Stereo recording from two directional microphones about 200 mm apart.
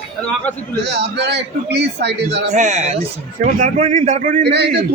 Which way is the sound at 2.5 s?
35° right (ahead or behind).